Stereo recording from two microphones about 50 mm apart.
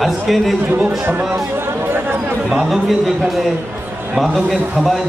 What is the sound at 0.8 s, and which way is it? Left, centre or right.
Speech, right.